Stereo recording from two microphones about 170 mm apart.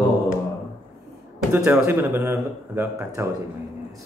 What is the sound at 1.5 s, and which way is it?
A man's voice, 15° right (ahead or behind).